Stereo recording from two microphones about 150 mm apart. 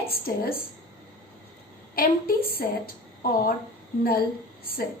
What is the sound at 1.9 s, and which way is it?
A woman's voice, 80° left.